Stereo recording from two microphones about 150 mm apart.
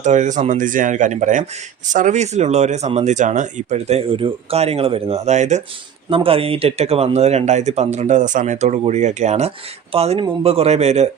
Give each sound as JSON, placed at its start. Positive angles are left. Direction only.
{"t": 0.0, "sound": "speech", "side_deg": -55}
{"t": 6.1, "sound": "speech", "side_deg": -40}